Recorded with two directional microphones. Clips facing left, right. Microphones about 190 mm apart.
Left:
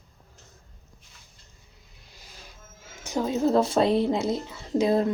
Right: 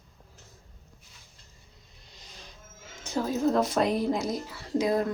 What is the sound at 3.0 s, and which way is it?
A woman's voice, 15° left (ahead or behind).